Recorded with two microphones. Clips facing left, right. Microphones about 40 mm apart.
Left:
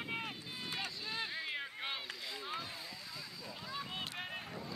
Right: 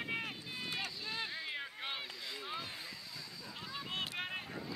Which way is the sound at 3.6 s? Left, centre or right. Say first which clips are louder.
Left 1 dB; centre.